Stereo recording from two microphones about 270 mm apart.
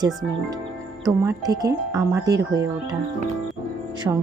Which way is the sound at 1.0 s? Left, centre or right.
Centre.